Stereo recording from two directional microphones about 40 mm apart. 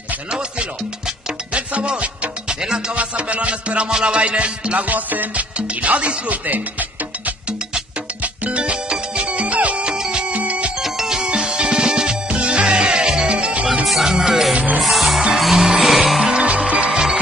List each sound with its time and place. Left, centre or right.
0.3 s music: right
3.0 s music: right
5.3 s music: right
8.2 s music: right
8.8 s music: right
10.3 s music: right
10.8 s music: centre; by 13.7 s right
14.0 s music: centre
15.5 s music: centre
16.2 s music: right